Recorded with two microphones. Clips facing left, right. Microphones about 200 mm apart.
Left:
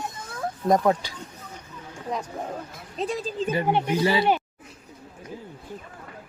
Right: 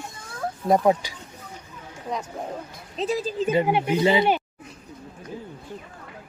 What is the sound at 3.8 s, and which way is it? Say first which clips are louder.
Speech: right 2 dB; 20° right (ahead or behind).